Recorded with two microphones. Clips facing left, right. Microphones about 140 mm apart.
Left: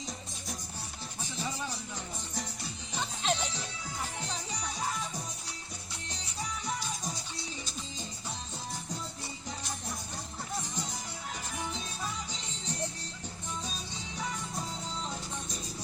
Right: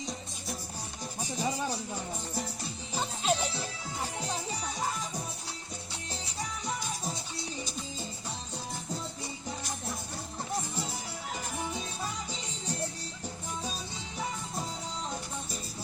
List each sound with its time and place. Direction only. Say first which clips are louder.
1.4 s music: right 5 dB; 40° right (ahead or behind)
3.2 s music: right 3 dB; 10° right (ahead or behind)
10.6 s music: right 2 dB; 10° right (ahead or behind)